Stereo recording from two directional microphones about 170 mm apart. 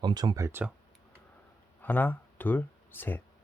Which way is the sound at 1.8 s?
10° left (ahead or behind).